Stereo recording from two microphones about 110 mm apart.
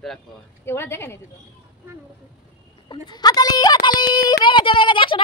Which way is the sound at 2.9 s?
40° left (ahead or behind).